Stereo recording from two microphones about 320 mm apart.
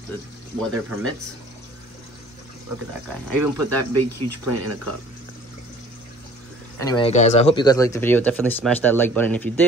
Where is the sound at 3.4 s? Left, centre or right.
Right.